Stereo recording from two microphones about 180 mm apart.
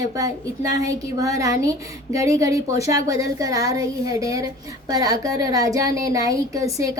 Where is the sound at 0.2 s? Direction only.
20° right (ahead or behind).